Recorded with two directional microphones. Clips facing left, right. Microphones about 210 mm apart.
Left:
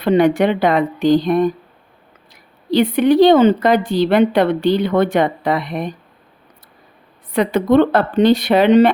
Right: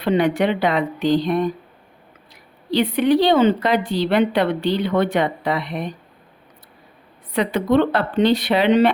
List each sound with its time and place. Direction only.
0.0 s a woman's voice: 45° left (ahead or behind)
7.3 s a woman's voice: 45° left (ahead or behind)